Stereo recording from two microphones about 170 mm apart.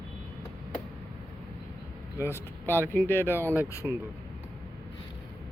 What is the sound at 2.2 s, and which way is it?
Speech, 15° left (ahead or behind).